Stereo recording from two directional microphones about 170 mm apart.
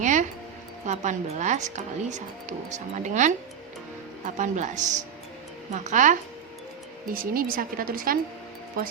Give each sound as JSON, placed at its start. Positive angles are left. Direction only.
{"t": 0.0, "sound": "music", "side_deg": -45}
{"t": 0.9, "sound": "speech", "side_deg": -45}
{"t": 4.4, "sound": "speech", "side_deg": -45}
{"t": 7.1, "sound": "a woman's voice", "side_deg": -55}